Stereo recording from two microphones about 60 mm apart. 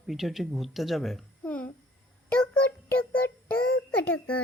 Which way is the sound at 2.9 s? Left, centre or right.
Left.